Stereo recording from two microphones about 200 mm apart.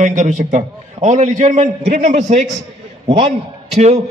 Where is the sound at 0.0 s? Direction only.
35° right (ahead or behind).